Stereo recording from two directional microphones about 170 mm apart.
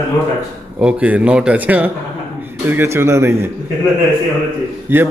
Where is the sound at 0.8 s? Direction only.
5° right (ahead or behind).